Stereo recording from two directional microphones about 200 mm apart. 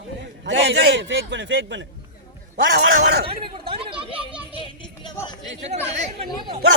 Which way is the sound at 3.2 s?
25° right (ahead or behind).